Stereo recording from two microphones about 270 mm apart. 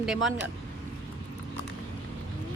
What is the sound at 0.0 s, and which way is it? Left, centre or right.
Speech, centre.